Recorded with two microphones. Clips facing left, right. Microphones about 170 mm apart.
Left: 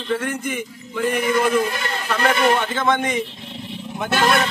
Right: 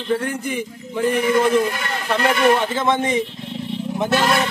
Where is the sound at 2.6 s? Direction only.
25° right (ahead or behind).